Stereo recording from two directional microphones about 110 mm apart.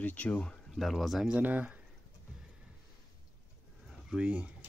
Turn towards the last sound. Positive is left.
turn(degrees=-15)  # may be behind; listen again after turning